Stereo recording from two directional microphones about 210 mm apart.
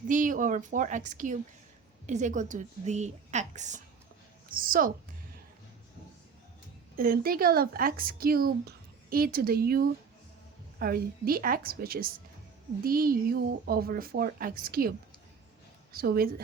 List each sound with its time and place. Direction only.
0.1 s a woman's voice: 40° right (ahead or behind)
6.9 s speech: 45° right (ahead or behind)